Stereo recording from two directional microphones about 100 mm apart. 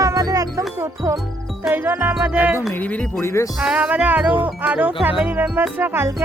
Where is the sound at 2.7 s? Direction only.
15° left (ahead or behind).